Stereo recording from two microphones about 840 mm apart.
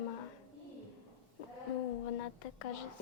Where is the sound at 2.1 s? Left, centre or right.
Left.